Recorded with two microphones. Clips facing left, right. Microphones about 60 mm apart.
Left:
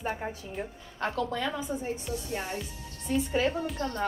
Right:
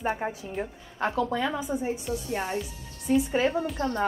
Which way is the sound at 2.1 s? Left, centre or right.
Right.